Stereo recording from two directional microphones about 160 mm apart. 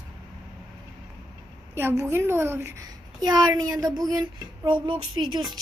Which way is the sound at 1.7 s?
15° right (ahead or behind).